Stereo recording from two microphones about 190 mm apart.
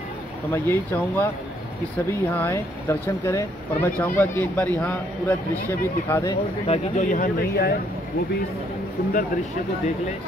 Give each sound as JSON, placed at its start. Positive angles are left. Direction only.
{"t": 0.5, "sound": "a man's voice", "side_deg": 15}
{"t": 6.7, "sound": "speech", "side_deg": 40}